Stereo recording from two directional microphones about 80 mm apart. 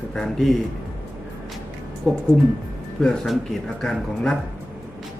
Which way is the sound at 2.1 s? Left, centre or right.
Centre.